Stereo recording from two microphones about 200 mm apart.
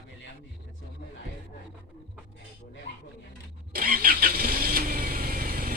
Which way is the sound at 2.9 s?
65° left (ahead or behind).